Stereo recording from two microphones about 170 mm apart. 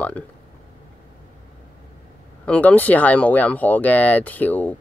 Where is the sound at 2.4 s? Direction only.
10° left (ahead or behind).